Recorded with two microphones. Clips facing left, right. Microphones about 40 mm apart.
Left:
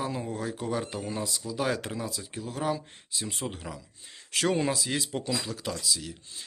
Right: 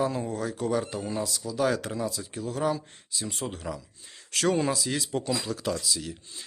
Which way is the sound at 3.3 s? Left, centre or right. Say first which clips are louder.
Right 2 dB; centre.